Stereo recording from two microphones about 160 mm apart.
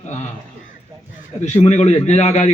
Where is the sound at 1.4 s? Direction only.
45° left (ahead or behind).